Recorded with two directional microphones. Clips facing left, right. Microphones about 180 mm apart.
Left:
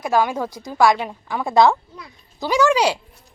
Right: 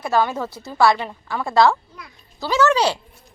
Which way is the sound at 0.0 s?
10° left (ahead or behind).